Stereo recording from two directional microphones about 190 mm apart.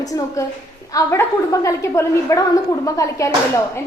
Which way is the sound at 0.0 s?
20° left (ahead or behind).